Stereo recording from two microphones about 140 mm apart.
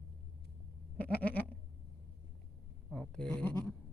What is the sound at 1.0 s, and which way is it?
Goat, 90° left.